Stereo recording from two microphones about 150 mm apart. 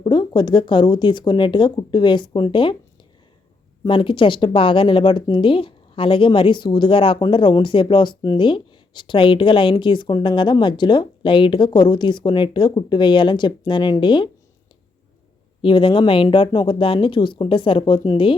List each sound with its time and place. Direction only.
0.0 s speech: 30° left (ahead or behind)
3.8 s speech: 35° left (ahead or behind)
15.6 s speech: 35° left (ahead or behind)